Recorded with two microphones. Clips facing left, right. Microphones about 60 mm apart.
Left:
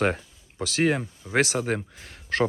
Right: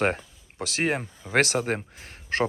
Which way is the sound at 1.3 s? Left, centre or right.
Right.